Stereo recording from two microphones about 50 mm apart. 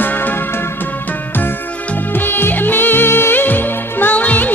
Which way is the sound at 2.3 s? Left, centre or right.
Left.